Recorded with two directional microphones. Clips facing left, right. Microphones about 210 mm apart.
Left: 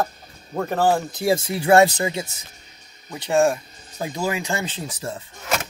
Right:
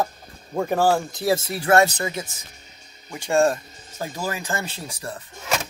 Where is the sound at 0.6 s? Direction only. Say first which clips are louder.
Right 1 dB; 10° right (ahead or behind).